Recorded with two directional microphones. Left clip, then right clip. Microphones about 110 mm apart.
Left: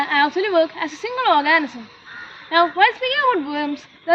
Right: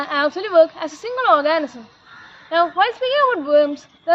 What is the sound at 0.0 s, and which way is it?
A woman's voice, 40° right (ahead or behind).